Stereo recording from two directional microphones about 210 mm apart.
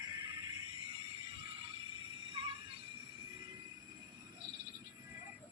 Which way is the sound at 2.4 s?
25° right (ahead or behind).